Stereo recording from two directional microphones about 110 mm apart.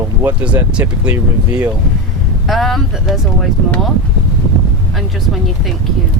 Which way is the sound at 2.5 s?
Centre (ahead or behind).